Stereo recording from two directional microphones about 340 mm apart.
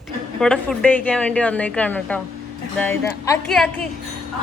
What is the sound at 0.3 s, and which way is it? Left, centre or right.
A woman's voice, centre.